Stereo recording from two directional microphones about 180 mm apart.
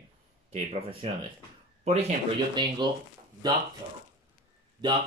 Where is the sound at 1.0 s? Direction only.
35° right (ahead or behind).